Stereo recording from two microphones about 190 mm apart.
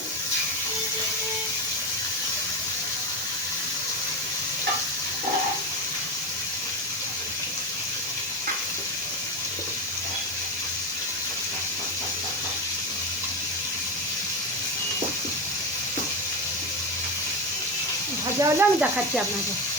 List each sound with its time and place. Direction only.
18.3 s sizzle: 15° right (ahead or behind)